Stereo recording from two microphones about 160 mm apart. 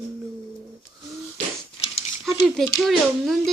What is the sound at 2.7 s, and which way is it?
Speech, centre (ahead or behind).